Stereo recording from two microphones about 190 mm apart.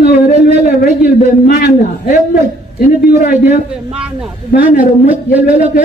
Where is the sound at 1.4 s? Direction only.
50° left (ahead or behind).